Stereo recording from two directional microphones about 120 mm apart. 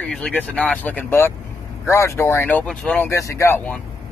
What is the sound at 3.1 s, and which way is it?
Speech, 25° left (ahead or behind).